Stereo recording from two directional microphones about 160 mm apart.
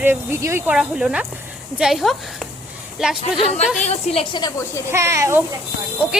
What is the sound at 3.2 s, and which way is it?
A woman's voice, 40° left (ahead or behind).